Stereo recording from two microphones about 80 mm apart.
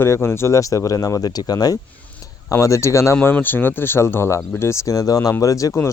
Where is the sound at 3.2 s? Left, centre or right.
Left.